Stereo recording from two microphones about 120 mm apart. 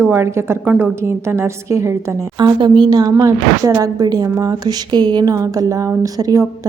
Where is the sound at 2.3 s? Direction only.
40° right (ahead or behind).